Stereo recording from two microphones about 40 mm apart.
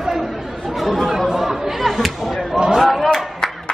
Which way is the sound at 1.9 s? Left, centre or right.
Centre.